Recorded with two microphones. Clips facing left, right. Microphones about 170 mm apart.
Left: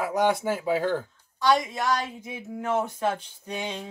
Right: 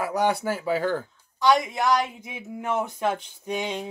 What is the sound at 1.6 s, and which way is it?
Speech, 15° right (ahead or behind).